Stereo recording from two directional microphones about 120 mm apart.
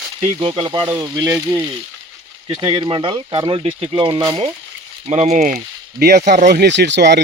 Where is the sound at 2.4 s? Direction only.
40° right (ahead or behind).